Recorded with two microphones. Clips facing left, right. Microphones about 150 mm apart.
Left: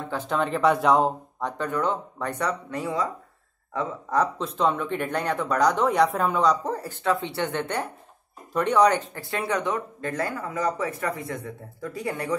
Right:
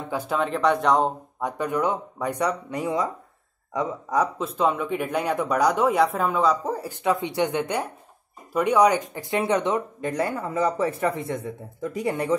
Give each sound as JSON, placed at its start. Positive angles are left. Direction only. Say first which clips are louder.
{"t": 0.1, "sound": "speech", "louder": "right 1 dB", "side_deg": -10}
{"t": 1.4, "sound": "speech", "louder": "right 2 dB", "side_deg": -10}